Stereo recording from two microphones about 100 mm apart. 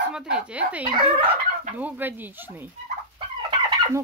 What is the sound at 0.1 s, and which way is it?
Fowl, 10° right (ahead or behind).